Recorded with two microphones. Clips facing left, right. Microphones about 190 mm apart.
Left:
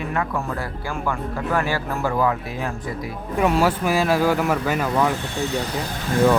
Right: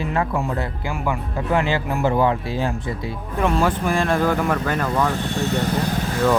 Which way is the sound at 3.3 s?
5° left (ahead or behind).